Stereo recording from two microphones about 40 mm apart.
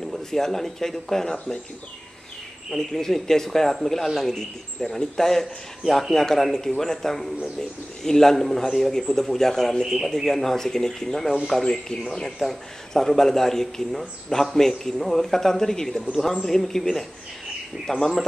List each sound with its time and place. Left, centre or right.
0.3 s speech: centre
2.7 s speech: centre